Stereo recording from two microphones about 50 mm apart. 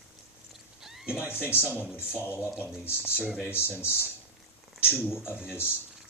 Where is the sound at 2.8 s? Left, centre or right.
Left.